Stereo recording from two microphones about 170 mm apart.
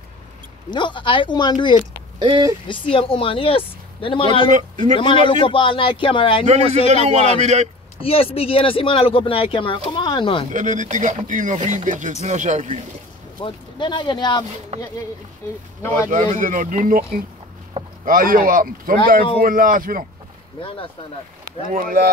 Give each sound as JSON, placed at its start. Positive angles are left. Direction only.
{"t": 0.7, "sound": "speech", "side_deg": 25}
{"t": 2.1, "sound": "speech", "side_deg": -25}
{"t": 2.7, "sound": "speech", "side_deg": 30}
{"t": 4.5, "sound": "speech", "side_deg": -45}
{"t": 4.9, "sound": "speech", "side_deg": 30}
{"t": 6.4, "sound": "a man's voice", "side_deg": -40}
{"t": 8.0, "sound": "speech", "side_deg": 35}
{"t": 10.5, "sound": "speech", "side_deg": -45}
{"t": 13.4, "sound": "speech", "side_deg": 30}
{"t": 16.1, "sound": "speech", "side_deg": -50}
{"t": 21.6, "sound": "speech", "side_deg": -50}